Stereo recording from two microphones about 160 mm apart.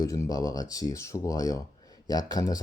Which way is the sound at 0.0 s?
20° left (ahead or behind).